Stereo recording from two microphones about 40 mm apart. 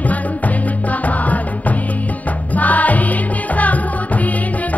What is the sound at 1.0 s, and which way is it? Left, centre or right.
Music, left.